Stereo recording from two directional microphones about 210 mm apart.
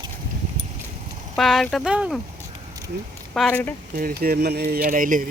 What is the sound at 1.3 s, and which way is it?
Speech, centre (ahead or behind).